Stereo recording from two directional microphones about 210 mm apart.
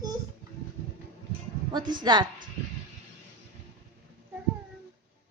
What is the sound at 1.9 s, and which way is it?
Speech, 20° right (ahead or behind).